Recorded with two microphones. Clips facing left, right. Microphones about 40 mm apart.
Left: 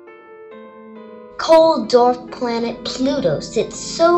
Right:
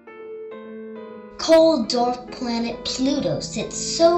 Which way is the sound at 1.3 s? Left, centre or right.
Left.